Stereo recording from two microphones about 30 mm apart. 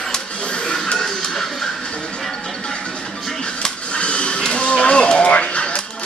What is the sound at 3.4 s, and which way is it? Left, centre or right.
Music, left.